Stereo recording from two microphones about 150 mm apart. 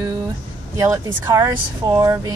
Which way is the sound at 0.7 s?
20° right (ahead or behind).